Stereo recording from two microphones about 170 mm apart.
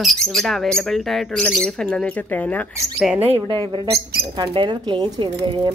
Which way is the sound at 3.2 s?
35° right (ahead or behind).